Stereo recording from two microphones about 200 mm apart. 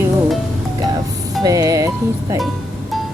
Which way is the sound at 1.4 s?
20° right (ahead or behind).